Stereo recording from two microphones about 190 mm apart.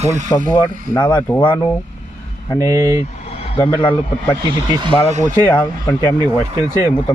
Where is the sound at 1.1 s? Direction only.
20° left (ahead or behind).